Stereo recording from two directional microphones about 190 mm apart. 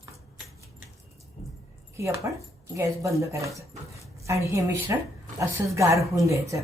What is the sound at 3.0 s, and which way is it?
A woman's voice, 15° right (ahead or behind).